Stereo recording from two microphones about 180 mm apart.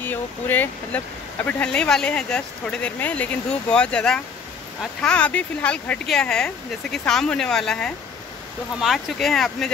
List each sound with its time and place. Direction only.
0.0 s speech: 10° left (ahead or behind)